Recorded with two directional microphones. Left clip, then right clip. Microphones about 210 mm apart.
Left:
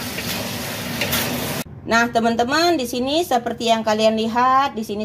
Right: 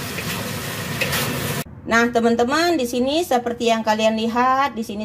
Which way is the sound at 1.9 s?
Centre (ahead or behind).